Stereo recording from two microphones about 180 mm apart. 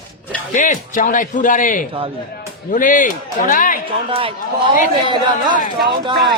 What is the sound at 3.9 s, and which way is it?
A man's voice, 30° right (ahead or behind).